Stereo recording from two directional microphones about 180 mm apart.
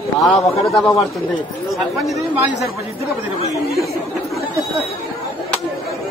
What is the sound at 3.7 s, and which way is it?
Chatter, centre (ahead or behind).